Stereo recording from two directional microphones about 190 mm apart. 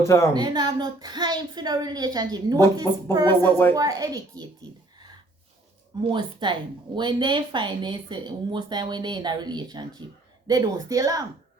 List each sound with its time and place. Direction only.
0.0 s a woman's voice: 15° left (ahead or behind)
0.3 s speech: 20° right (ahead or behind)
3.4 s a woman's voice: 10° left (ahead or behind)
3.8 s speech: 20° right (ahead or behind)
6.0 s speech: 25° right (ahead or behind)